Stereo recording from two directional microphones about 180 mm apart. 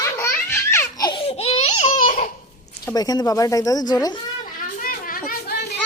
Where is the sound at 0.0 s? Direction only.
15° left (ahead or behind).